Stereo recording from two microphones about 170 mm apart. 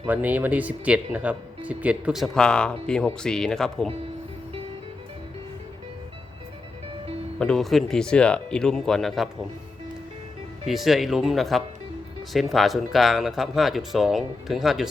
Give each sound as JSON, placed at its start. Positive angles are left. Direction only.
{"t": 0.1, "sound": "speech", "side_deg": -10}
{"t": 7.3, "sound": "speech", "side_deg": 5}
{"t": 10.7, "sound": "speech", "side_deg": 0}